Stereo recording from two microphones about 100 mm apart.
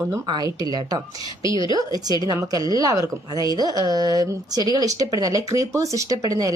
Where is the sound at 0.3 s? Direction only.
40° right (ahead or behind).